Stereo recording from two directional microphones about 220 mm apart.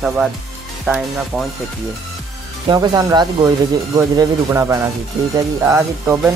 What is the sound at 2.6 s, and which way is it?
Speech, 20° right (ahead or behind).